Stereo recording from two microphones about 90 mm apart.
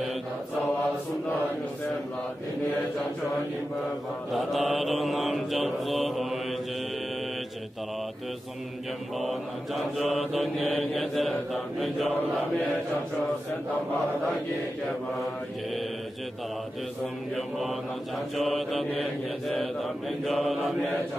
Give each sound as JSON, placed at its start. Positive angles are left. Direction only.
{"t": 4.3, "sound": "mantra", "side_deg": 0}
{"t": 9.9, "sound": "mantra", "side_deg": 0}
{"t": 17.4, "sound": "mantra", "side_deg": 0}